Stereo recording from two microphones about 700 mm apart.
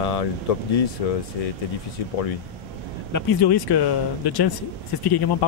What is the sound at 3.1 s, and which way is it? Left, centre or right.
Speech, left.